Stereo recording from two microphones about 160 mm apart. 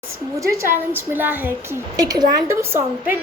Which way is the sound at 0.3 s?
20° right (ahead or behind).